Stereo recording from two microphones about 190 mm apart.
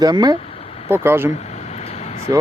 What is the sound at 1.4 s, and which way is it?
Vehicle, 35° left (ahead or behind).